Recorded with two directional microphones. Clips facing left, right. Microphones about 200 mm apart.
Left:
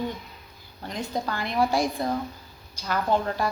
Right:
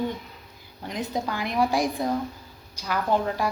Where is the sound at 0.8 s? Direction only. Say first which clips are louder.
Right 1 dB; 10° right (ahead or behind).